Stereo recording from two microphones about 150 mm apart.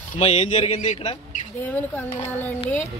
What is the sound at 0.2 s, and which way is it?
Speech, 40° left (ahead or behind).